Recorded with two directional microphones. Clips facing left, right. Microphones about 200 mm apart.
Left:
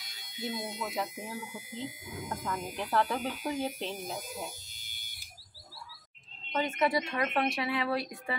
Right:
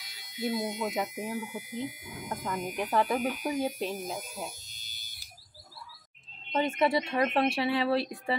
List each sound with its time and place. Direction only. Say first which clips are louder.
0.4 s a woman's voice: right 6 dB; 25° right (ahead or behind)
1.7 s speech: right 4 dB; 25° left (ahead or behind)
2.2 s speech: right 3 dB; 15° right (ahead or behind)
6.5 s a woman's voice: right 3 dB; 30° right (ahead or behind)